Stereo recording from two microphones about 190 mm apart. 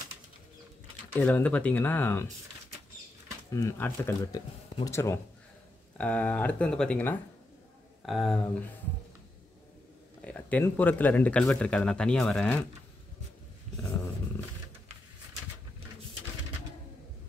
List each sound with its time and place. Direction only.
1.1 s speech: 10° left (ahead or behind)
3.5 s speech: 15° left (ahead or behind)
10.2 s speech: 10° left (ahead or behind)